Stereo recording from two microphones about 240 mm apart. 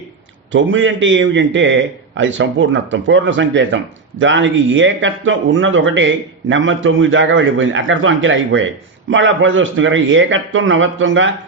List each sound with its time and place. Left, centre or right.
0.5 s a man's voice: right